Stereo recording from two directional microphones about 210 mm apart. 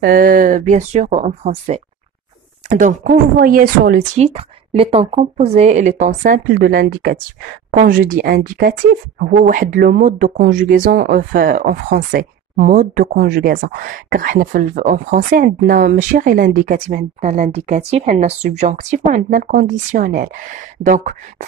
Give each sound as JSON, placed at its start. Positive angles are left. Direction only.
{"t": 0.0, "sound": "speech", "side_deg": -45}
{"t": 4.3, "sound": "speech", "side_deg": -30}